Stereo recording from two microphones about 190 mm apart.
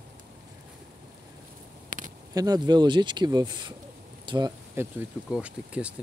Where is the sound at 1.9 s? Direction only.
45° right (ahead or behind).